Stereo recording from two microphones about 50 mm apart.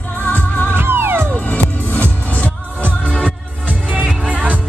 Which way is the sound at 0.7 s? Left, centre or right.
Right.